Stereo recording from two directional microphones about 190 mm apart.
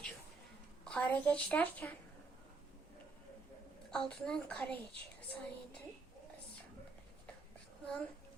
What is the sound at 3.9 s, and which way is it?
Speech, 5° left (ahead or behind).